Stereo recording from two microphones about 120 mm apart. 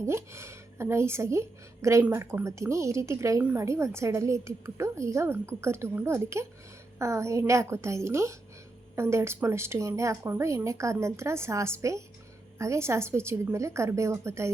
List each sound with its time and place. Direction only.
0.0 s a woman's voice: 25° right (ahead or behind)